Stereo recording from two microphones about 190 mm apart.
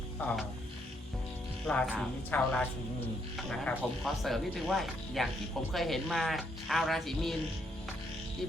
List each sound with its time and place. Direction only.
0.2 s speech: 5° left (ahead or behind)
1.6 s speech: 5° left (ahead or behind)